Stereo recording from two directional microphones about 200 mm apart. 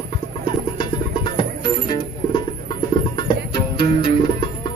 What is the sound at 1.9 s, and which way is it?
Music, 25° left (ahead or behind).